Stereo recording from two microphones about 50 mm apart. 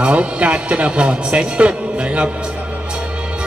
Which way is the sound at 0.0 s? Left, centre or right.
Right.